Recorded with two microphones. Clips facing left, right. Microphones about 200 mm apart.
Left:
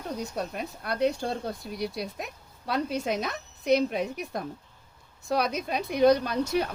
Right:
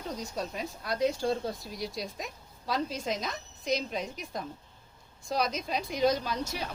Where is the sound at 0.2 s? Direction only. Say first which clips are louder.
Left 3 dB; 60° left (ahead or behind).